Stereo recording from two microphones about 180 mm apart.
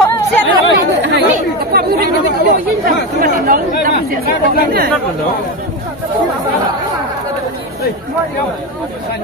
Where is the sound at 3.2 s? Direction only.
50° right (ahead or behind).